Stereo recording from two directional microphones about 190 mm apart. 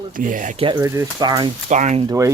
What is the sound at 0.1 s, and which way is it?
Speech, 45° right (ahead or behind).